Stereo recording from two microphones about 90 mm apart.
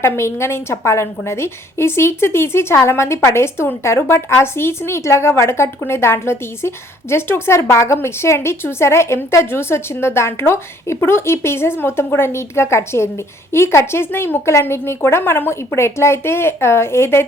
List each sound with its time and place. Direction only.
0.0 s a woman's voice: 30° left (ahead or behind)